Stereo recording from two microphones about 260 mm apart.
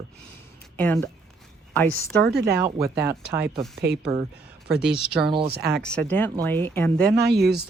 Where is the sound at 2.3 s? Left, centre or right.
Right.